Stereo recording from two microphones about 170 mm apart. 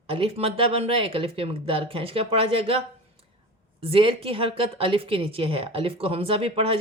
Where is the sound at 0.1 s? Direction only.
35° right (ahead or behind).